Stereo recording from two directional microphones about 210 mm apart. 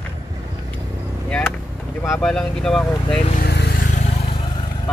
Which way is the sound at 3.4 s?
50° left (ahead or behind).